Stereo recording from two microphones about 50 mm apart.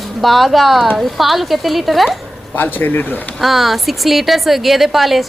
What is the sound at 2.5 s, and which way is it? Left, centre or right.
Speech, left.